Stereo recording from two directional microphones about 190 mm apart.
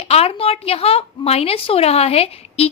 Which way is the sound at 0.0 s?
30° left (ahead or behind).